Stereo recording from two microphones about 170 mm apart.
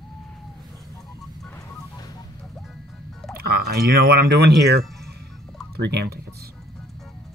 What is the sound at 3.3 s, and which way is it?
Speech, 65° right (ahead or behind).